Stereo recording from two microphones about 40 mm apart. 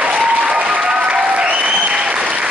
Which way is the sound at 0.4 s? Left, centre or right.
Right.